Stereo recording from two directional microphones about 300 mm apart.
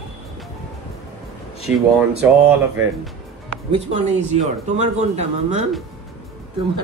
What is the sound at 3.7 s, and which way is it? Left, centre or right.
Speech, right.